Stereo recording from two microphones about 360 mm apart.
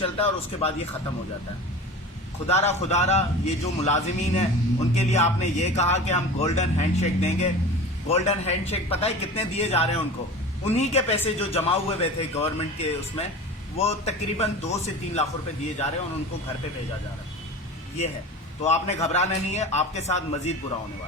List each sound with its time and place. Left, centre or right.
0.0 s a man's voice: centre
2.5 s a man's voice: centre
18.6 s a man's voice: centre